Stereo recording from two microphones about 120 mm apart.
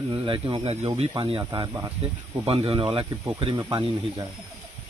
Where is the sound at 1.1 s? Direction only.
45° right (ahead or behind).